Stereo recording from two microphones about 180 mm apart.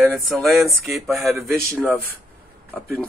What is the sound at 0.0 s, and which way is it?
Speech, centre (ahead or behind).